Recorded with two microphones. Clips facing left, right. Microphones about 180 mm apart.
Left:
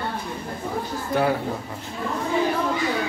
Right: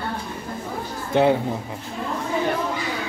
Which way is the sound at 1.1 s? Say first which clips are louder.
Right 4 dB; 25° right (ahead or behind).